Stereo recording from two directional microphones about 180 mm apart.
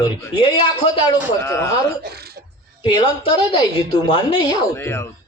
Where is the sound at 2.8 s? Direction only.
25° left (ahead or behind).